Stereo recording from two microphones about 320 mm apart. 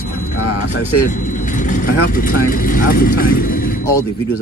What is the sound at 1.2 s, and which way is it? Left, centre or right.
Speech, left.